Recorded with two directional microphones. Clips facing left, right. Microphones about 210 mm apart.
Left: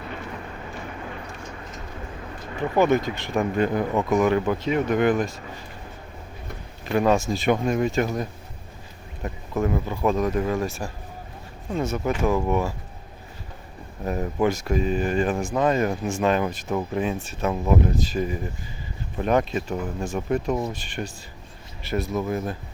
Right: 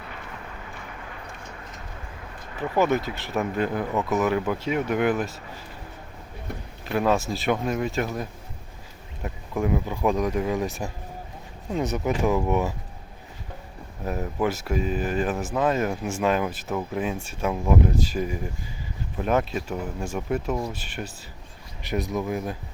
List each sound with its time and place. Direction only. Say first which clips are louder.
2.6 s speech: left 3 dB; 5° right (ahead or behind)
6.8 s speech: left 2 dB; centre (ahead or behind); by 12.7 s 15° right (ahead or behind)
14.0 s speech: left 3 dB; 5° right (ahead or behind)
21.8 s speech: left 1 dB; 15° right (ahead or behind)